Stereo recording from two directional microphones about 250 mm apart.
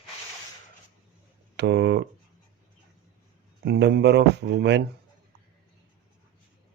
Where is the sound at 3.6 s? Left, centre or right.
Right.